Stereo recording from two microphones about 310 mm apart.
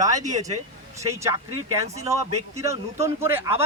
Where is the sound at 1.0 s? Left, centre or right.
Centre.